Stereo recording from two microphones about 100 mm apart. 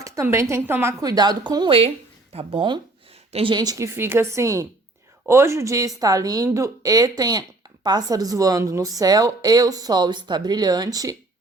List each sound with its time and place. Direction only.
0.0 s a woman's voice: 25° right (ahead or behind)
1.0 s speech: 40° right (ahead or behind)
2.3 s speech: 70° right (ahead or behind)
3.5 s speech: 45° right (ahead or behind)
3.8 s speech: 25° right (ahead or behind)